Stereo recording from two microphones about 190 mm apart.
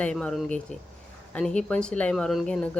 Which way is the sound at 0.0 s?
5° left (ahead or behind).